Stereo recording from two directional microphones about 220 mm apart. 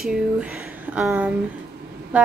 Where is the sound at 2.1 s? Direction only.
5° right (ahead or behind).